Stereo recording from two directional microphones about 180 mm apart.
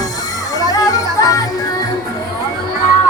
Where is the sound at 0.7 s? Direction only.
20° left (ahead or behind).